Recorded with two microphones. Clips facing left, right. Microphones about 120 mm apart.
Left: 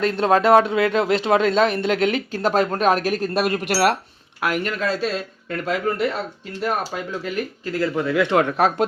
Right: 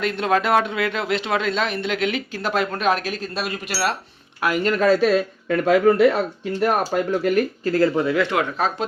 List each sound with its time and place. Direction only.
0.0 s speech: 35° left (ahead or behind); by 3.9 s 60° left (ahead or behind)
4.6 s speech: 50° right (ahead or behind)
8.3 s speech: 30° left (ahead or behind)